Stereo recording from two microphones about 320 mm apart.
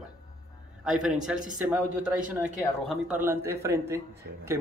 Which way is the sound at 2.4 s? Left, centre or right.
Centre.